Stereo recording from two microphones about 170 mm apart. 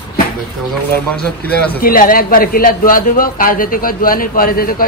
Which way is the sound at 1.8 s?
55° left (ahead or behind).